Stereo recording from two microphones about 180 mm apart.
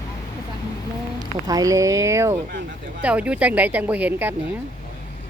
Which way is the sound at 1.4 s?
20° right (ahead or behind).